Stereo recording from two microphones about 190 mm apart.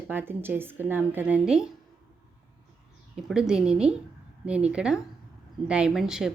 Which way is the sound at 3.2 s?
Centre (ahead or behind).